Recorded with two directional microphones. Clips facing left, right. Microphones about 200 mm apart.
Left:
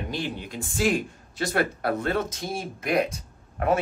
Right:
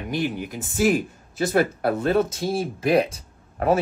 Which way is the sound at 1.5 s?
25° right (ahead or behind).